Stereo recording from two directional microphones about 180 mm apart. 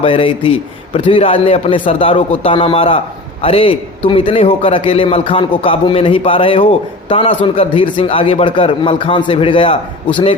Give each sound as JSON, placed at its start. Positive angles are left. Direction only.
{"t": 0.0, "sound": "a man's voice", "side_deg": 30}